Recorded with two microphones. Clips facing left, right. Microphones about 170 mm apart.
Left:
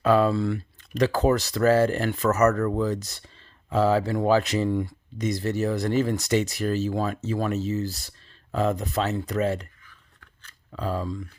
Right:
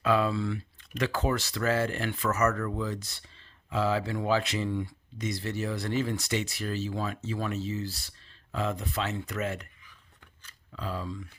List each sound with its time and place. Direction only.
0.0 s speech: 40° left (ahead or behind)
9.8 s a sound: 15° right (ahead or behind)
10.7 s speech: 45° left (ahead or behind)